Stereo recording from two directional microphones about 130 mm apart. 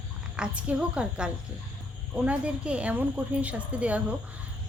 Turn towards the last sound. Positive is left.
turn(degrees=-10)  # may be behind; listen again after turning